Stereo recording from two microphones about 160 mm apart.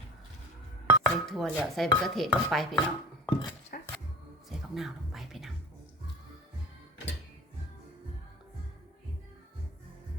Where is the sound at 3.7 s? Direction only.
60° left (ahead or behind).